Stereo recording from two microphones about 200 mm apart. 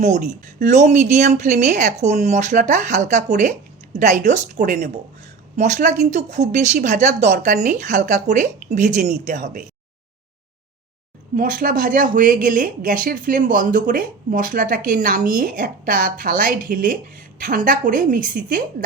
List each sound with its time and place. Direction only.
0.0 s speech: 35° right (ahead or behind)
11.3 s a woman's voice: 40° right (ahead or behind)